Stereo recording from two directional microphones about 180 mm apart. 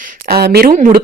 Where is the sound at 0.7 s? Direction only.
50° right (ahead or behind).